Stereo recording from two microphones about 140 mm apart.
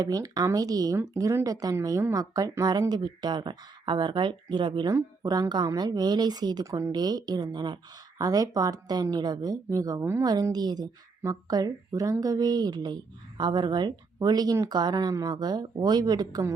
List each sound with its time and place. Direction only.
0.0 s speech: 25° right (ahead or behind)
10.2 s speech: 30° right (ahead or behind)